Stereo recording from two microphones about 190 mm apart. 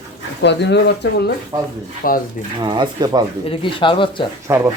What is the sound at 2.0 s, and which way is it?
Speech, 50° left (ahead or behind).